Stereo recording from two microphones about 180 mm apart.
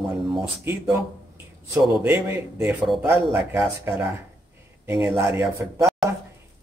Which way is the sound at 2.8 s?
5° right (ahead or behind).